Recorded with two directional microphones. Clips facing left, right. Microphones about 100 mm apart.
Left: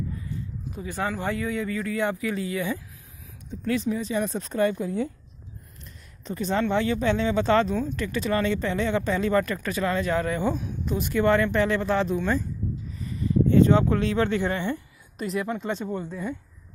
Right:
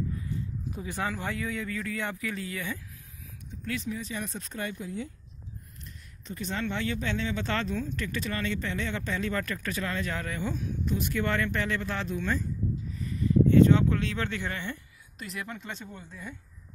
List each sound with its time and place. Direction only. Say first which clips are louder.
0.9 s speech: left 5 dB; 5° left (ahead or behind)
3.6 s speech: left 8 dB; 30° left (ahead or behind)
4.7 s speech: left 9 dB; 60° left (ahead or behind)
6.2 s speech: left 8 dB; 40° left (ahead or behind); by 12.4 s 20° left (ahead or behind)
13.5 s speech: left 2 dB; 35° left (ahead or behind)
15.8 s speech: left 12 dB; 55° left (ahead or behind)